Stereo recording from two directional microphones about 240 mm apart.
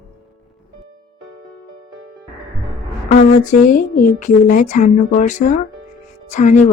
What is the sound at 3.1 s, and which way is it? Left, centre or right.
Speech, left.